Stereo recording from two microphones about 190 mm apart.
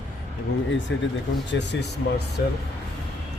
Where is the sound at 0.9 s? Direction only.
70° left (ahead or behind).